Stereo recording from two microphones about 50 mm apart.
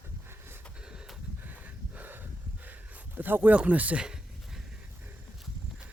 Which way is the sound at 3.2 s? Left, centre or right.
Right.